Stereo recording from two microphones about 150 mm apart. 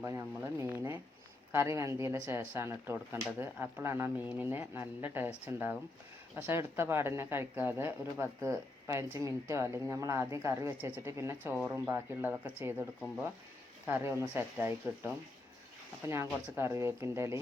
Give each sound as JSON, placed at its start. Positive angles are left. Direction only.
{"t": 0.0, "sound": "a woman's voice", "side_deg": -20}